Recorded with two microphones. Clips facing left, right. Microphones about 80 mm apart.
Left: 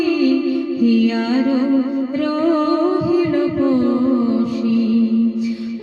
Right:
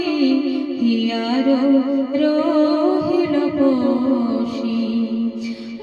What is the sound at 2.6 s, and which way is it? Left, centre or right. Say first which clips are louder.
Music: right 1 dB; centre.